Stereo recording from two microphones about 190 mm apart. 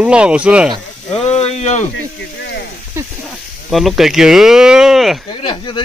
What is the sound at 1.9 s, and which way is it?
Speech, 65° left (ahead or behind).